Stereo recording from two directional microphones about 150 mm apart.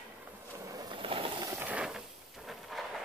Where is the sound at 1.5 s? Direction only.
10° right (ahead or behind).